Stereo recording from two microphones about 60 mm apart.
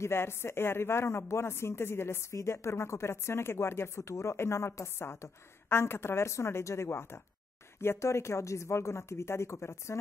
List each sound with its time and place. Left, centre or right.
0.0 s speech: left